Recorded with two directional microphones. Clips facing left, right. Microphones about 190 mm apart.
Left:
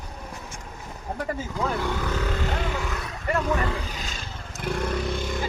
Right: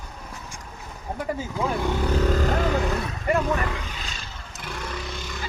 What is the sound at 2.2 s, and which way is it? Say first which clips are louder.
Vehicle: right 5 dB; 40° right (ahead or behind).